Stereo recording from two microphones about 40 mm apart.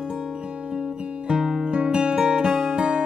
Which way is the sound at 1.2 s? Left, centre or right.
Centre.